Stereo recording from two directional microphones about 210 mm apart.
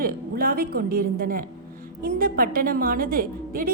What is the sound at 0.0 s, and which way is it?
A woman's voice, 45° right (ahead or behind).